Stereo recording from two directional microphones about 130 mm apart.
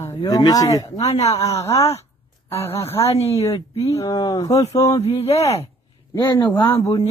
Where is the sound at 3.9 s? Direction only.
30° left (ahead or behind).